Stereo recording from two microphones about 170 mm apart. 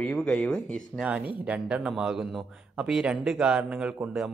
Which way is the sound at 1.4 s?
10° right (ahead or behind).